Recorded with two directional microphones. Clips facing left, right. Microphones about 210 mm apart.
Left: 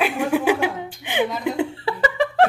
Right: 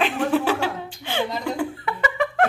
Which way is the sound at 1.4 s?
25° left (ahead or behind).